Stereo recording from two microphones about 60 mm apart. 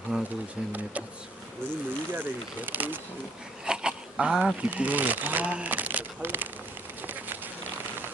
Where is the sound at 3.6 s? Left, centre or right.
Centre.